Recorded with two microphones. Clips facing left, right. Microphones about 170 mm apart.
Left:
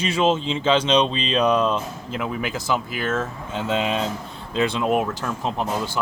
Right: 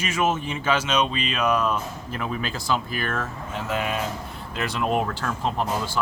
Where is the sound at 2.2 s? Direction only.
15° left (ahead or behind).